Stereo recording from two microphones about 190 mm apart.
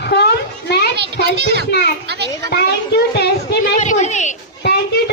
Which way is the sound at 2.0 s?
60° right (ahead or behind).